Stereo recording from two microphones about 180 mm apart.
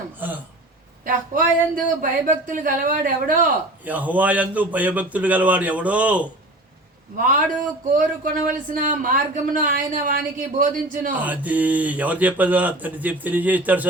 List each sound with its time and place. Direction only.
0.2 s a sound: 10° right (ahead or behind)
1.0 s speech: 50° right (ahead or behind)
3.8 s speech: 10° right (ahead or behind)
7.9 s speech: 50° right (ahead or behind)
11.1 s speech: 10° right (ahead or behind)